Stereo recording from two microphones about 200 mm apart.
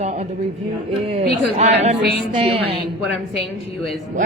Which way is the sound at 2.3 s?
30° right (ahead or behind).